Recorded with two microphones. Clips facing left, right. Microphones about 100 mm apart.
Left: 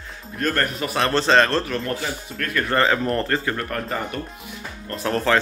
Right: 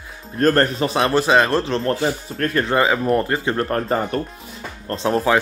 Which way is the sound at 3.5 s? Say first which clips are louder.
Right 6 dB; 35° right (ahead or behind).